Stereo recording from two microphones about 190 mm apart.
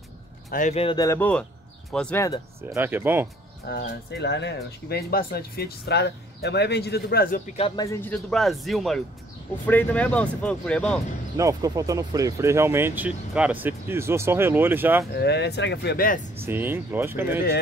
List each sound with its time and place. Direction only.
0.5 s speech: 40° left (ahead or behind)
0.9 s speech: 15° left (ahead or behind)
2.7 s speech: 10° right (ahead or behind)
3.6 s speech: 60° left (ahead or behind)
7.5 s speech: 30° left (ahead or behind)
7.8 s speech: 15° left (ahead or behind)
11.3 s speech: 15° right (ahead or behind)
15.1 s speech: 60° left (ahead or behind)
16.3 s speech: 10° right (ahead or behind)